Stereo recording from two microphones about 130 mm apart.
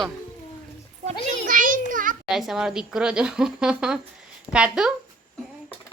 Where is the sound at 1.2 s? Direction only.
90° right.